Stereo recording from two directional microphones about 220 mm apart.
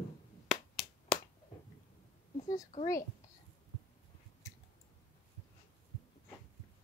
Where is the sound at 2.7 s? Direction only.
35° left (ahead or behind).